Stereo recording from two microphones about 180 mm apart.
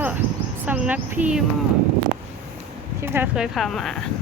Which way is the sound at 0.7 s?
10° right (ahead or behind).